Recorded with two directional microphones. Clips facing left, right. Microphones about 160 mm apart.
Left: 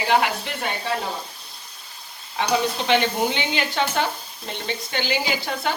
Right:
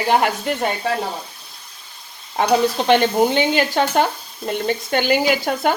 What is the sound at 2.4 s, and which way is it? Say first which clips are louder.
Sizzle: right 6 dB; 45° right (ahead or behind).